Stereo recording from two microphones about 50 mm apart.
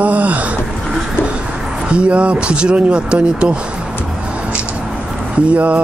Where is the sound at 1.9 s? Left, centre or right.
Right.